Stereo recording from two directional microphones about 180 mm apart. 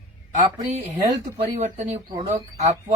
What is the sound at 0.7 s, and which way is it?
A man's voice, 40° right (ahead or behind).